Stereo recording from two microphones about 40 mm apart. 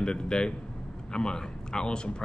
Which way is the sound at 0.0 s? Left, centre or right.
Left.